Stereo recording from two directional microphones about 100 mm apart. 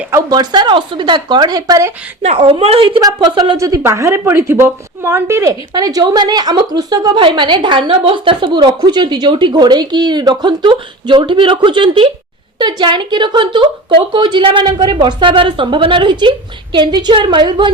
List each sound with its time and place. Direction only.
0.3 s a woman's voice: 45° right (ahead or behind)
2.3 s speech: 65° right (ahead or behind)
3.2 s a woman's voice: 45° right (ahead or behind)
3.6 s speech: 30° right (ahead or behind)
5.7 s a woman's voice: 40° right (ahead or behind)
7.2 s a woman's voice: 55° right (ahead or behind)